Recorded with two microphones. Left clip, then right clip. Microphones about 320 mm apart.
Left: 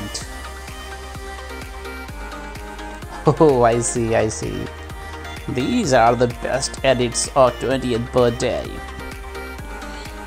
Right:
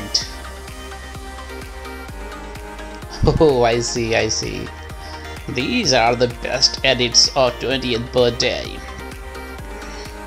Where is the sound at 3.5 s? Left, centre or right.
Centre.